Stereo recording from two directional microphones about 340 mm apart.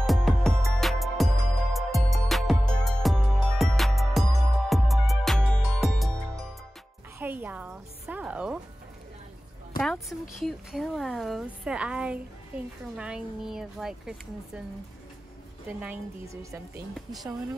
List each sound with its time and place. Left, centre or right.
0.0 s music: centre
7.2 s a sound: centre
9.8 s speech: centre
15.8 s speech: centre